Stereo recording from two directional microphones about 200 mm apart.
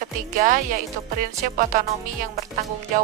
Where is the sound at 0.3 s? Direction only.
40° right (ahead or behind).